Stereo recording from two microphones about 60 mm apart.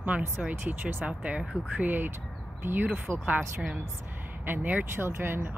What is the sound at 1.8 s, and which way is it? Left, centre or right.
A woman's voice, right.